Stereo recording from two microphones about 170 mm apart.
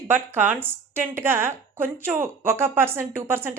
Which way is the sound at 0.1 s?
10° right (ahead or behind).